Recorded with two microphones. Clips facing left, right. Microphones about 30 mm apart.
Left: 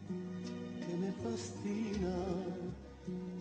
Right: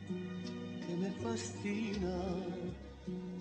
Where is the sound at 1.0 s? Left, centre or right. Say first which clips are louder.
Right 1 dB; right.